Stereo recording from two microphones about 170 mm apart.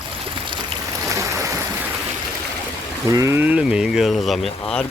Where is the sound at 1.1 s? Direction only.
20° right (ahead or behind).